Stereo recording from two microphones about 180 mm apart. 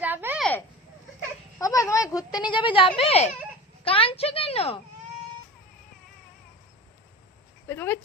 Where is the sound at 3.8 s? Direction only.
30° left (ahead or behind).